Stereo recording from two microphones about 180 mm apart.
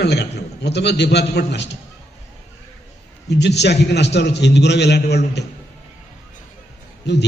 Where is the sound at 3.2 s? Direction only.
70° left (ahead or behind).